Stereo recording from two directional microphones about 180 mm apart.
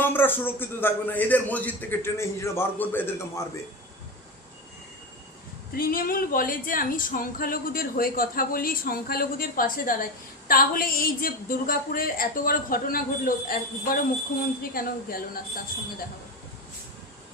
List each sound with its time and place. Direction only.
0.0 s speech: 10° left (ahead or behind)
5.7 s speech: 55° left (ahead or behind)